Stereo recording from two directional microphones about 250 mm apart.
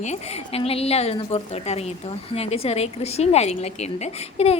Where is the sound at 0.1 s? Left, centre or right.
Left.